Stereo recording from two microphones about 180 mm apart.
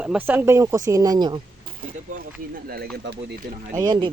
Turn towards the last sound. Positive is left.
turn(degrees=-25)  # may be behind; listen again after turning